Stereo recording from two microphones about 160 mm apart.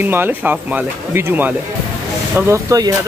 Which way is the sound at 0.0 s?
10° right (ahead or behind).